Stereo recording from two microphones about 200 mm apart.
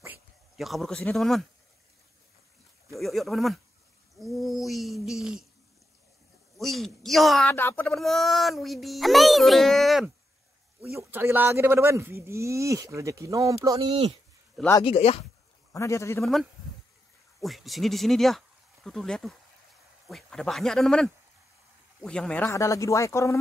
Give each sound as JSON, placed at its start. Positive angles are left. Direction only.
{"t": 0.6, "sound": "a child's voice", "side_deg": 0}
{"t": 2.9, "sound": "a child's voice", "side_deg": 0}
{"t": 6.6, "sound": "a child's voice", "side_deg": 0}
{"t": 7.9, "sound": "a child's voice", "side_deg": 0}
{"t": 14.7, "sound": "speech", "side_deg": 25}
{"t": 15.7, "sound": "speech", "side_deg": 15}
{"t": 17.4, "sound": "a child's voice", "side_deg": 0}